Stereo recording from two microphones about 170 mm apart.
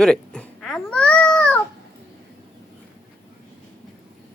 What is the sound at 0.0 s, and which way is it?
Babbling, 5° left (ahead or behind).